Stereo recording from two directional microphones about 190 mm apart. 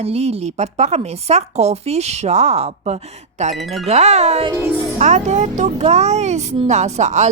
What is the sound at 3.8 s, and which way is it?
A woman's voice, 35° right (ahead or behind).